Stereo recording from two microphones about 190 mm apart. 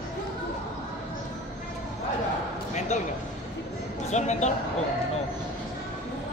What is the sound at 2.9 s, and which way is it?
Speech, 35° left (ahead or behind).